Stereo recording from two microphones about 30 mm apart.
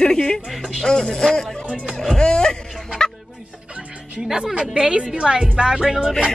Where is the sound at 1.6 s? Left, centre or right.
Right.